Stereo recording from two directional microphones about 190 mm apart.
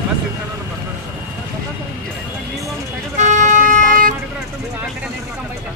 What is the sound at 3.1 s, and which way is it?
Vehicle, 40° right (ahead or behind).